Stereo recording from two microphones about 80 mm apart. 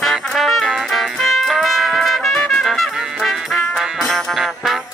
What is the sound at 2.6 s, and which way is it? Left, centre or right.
Music, centre.